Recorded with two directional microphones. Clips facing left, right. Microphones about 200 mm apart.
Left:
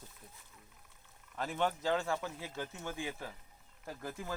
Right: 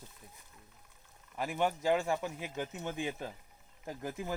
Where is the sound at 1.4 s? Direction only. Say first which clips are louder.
Right 2 dB; 10° right (ahead or behind).